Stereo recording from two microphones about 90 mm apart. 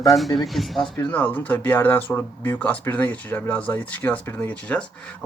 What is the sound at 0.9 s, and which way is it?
Speech, 20° left (ahead or behind).